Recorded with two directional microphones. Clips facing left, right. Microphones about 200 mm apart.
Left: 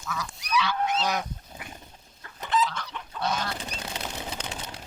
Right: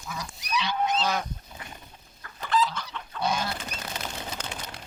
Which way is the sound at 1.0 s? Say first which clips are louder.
Even; 15° left (ahead or behind).